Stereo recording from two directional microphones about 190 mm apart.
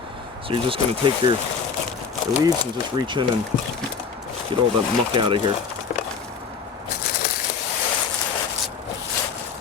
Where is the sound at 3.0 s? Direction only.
25° right (ahead or behind).